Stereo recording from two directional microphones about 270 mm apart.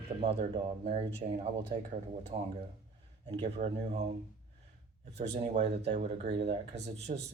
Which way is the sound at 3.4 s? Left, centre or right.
Right.